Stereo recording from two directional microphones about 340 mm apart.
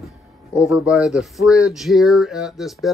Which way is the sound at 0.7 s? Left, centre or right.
Centre.